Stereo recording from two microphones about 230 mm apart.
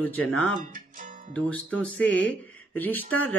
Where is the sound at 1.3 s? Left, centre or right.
Centre.